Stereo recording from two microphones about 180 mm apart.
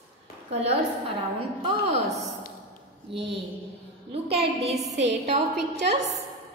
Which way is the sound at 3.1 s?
70° right (ahead or behind).